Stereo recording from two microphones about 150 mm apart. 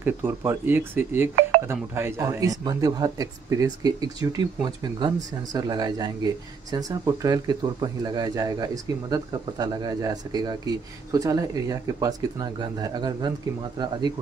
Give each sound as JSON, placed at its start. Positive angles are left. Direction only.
{"t": 0.0, "sound": "speech", "side_deg": -15}